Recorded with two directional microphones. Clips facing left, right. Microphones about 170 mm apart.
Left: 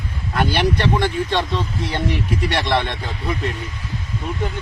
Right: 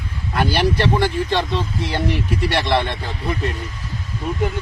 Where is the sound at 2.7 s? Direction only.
Centre (ahead or behind).